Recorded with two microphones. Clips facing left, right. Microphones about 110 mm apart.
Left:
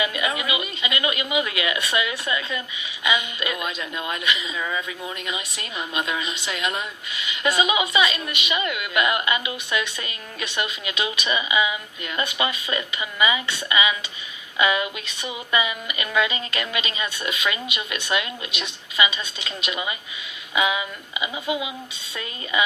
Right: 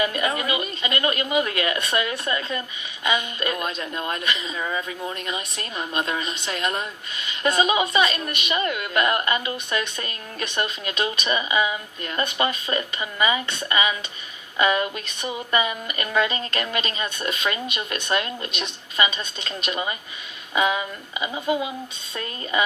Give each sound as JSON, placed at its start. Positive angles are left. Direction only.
{"t": 0.0, "sound": "speech", "side_deg": -40}
{"t": 5.5, "sound": "speech", "side_deg": -40}
{"t": 21.4, "sound": "speech", "side_deg": 10}
{"t": 22.1, "sound": "speech", "side_deg": -40}